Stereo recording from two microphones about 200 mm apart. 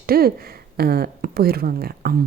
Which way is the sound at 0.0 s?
50° right (ahead or behind).